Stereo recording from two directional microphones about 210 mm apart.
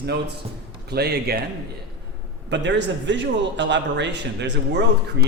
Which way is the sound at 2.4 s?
55° right (ahead or behind).